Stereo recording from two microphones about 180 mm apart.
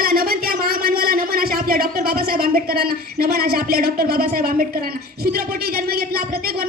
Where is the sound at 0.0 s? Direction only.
55° right (ahead or behind).